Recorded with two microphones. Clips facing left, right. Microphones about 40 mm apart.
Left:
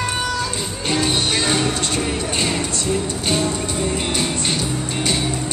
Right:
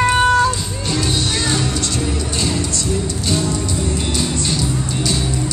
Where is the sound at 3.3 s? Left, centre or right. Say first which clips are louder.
Even; left.